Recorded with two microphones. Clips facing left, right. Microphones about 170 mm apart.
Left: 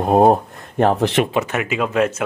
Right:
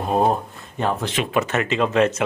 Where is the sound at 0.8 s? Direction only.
65° left (ahead or behind).